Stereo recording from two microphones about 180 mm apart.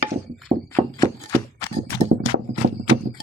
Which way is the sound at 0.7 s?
15° left (ahead or behind).